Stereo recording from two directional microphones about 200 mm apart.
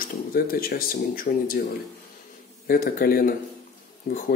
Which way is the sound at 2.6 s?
50° left (ahead or behind).